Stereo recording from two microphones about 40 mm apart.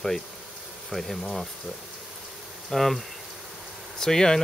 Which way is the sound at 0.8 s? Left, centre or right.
Centre.